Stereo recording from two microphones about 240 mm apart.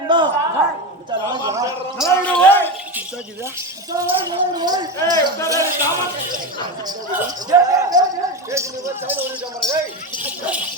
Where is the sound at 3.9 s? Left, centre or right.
Centre.